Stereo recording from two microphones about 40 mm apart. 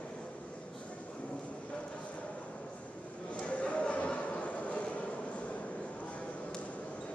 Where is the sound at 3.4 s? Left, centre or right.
Left.